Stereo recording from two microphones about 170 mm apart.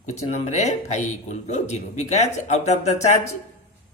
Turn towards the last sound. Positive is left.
turn(degrees=40)  # may be behind; listen again after turning